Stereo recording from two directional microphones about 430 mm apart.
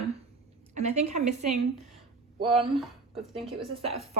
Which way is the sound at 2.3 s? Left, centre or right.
Centre.